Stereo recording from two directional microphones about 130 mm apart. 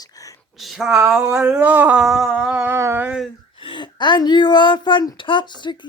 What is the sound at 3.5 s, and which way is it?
A woman's voice, 40° left (ahead or behind).